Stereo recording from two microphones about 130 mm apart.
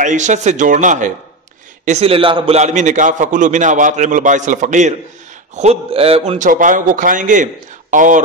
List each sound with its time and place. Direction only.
0.0 s a man's voice: 70° right (ahead or behind)
1.9 s a man's voice: 50° right (ahead or behind); by 4.9 s 70° right (ahead or behind)
5.6 s a man's voice: 50° right (ahead or behind)
6.3 s a man's voice: 85° right